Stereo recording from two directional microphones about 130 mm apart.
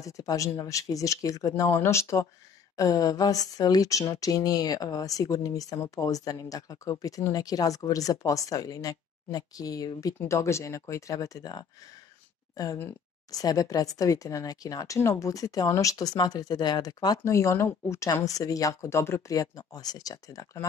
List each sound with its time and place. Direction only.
0.0 s speech: 25° left (ahead or behind)